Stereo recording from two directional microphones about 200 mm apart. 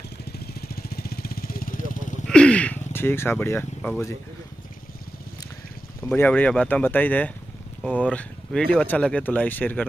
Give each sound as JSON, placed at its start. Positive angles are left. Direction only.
{"t": 0.6, "sound": "vehicle", "side_deg": 50}
{"t": 2.2, "sound": "a sound", "side_deg": 5}
{"t": 6.1, "sound": "speech", "side_deg": 10}